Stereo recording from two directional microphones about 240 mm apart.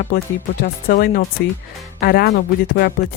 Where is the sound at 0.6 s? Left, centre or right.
Left.